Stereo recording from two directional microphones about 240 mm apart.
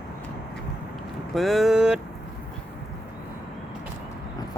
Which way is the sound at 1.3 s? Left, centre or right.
Centre.